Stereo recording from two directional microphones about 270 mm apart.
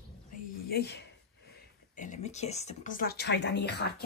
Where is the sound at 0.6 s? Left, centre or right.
Left.